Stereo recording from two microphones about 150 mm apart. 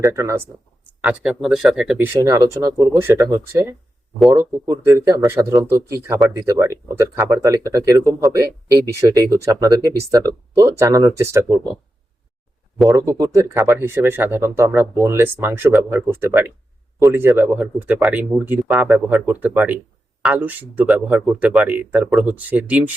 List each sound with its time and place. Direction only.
0.0 s speech: 20° right (ahead or behind)
1.0 s speech: 5° right (ahead or behind)
2.0 s speech: 20° right (ahead or behind)
12.9 s speech: 20° right (ahead or behind)